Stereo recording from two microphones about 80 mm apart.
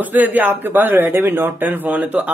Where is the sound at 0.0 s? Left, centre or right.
Right.